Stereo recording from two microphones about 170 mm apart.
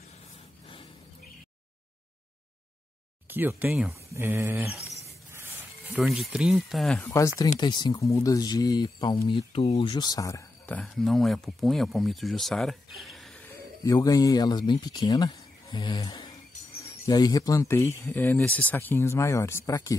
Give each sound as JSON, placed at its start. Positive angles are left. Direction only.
{"t": 3.3, "sound": "speech", "side_deg": -10}
{"t": 5.9, "sound": "speech", "side_deg": -5}
{"t": 7.1, "sound": "speech", "side_deg": 20}
{"t": 10.8, "sound": "speech", "side_deg": 0}
{"t": 13.5, "sound": "speech", "side_deg": 20}